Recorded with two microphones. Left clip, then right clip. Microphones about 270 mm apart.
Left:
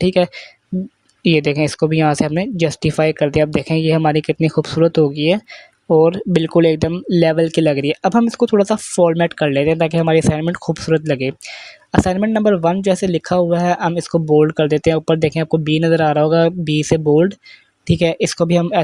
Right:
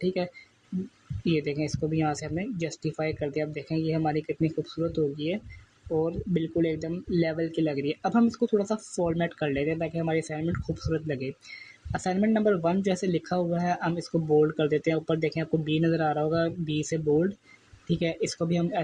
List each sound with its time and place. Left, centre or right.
0.0 s speech: left